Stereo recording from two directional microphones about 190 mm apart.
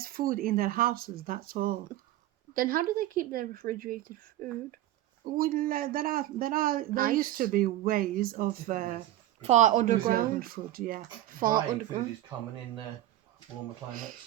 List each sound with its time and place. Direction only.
0.0 s speech: 50° right (ahead or behind)